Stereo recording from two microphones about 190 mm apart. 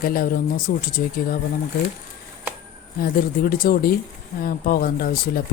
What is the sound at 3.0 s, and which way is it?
Speech, 50° left (ahead or behind).